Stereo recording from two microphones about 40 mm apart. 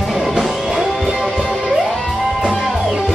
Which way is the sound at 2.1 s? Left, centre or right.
Centre.